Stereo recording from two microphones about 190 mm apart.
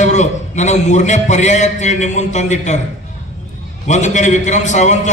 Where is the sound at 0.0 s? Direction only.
40° left (ahead or behind).